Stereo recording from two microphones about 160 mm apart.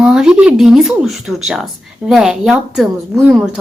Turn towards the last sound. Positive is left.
turn(degrees=0)  # may be behind; listen again after turning